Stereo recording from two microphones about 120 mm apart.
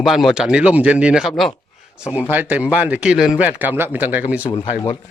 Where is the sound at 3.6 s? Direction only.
15° right (ahead or behind).